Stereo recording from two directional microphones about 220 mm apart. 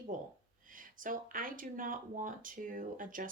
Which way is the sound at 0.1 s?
35° right (ahead or behind).